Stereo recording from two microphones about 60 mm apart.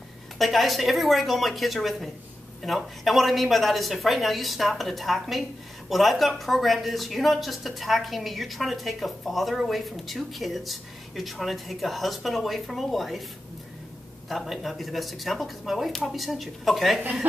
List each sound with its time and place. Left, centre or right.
0.4 s speech: centre
14.3 s speech: centre
17.0 s speech: right